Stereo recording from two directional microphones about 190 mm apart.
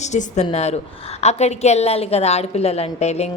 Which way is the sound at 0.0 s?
40° left (ahead or behind).